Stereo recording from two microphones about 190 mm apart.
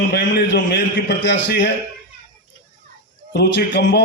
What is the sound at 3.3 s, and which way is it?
Speech, 65° left (ahead or behind).